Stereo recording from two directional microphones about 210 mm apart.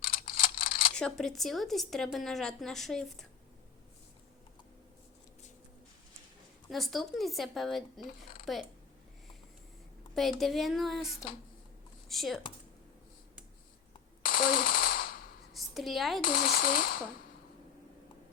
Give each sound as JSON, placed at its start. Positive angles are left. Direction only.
{"t": 0.0, "sound": "camera", "side_deg": 45}
{"t": 0.9, "sound": "a woman's voice", "side_deg": 5}
{"t": 6.7, "sound": "a woman's voice", "side_deg": 0}
{"t": 10.2, "sound": "a woman's voice", "side_deg": 0}
{"t": 14.2, "sound": "machine gun", "side_deg": 45}
{"t": 15.5, "sound": "a woman's voice", "side_deg": 0}
{"t": 16.2, "sound": "speech", "side_deg": 45}